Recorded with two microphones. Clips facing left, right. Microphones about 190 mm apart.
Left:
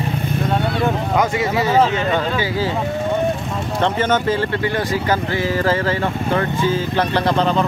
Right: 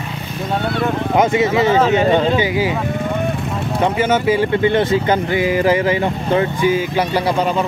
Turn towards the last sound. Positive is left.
turn(degrees=-10)  # may be behind; listen again after turning